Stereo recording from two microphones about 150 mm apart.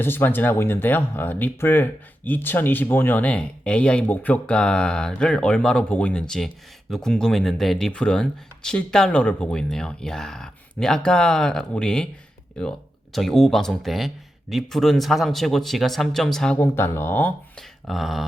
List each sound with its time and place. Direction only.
0.0 s speech: 15° left (ahead or behind)
16.6 s speech: 15° left (ahead or behind)
17.6 s a sound: centre (ahead or behind)